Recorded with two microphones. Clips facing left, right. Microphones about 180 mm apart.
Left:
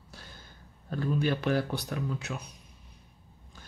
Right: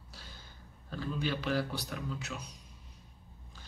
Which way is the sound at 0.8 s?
50° left (ahead or behind).